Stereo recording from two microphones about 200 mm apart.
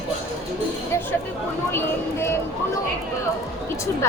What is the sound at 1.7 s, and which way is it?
Speech, 10° left (ahead or behind).